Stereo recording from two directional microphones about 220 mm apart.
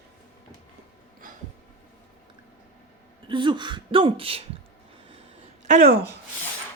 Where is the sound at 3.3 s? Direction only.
20° right (ahead or behind).